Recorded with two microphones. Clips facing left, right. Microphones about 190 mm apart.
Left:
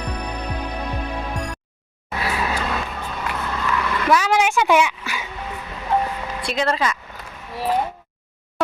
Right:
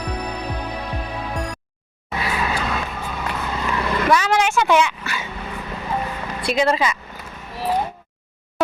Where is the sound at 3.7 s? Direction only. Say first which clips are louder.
Right 2 dB; 30° right (ahead or behind).